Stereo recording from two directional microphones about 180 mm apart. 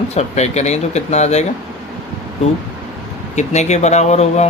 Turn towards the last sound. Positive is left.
turn(degrees=40)  # may be behind; listen again after turning